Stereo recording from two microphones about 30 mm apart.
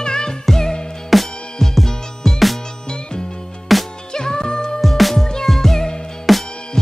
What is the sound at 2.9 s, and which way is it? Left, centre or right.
Music, left.